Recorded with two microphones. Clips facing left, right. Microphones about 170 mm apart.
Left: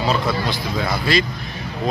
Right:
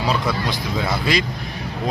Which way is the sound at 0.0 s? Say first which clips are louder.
Left 1 dB; 15° right (ahead or behind).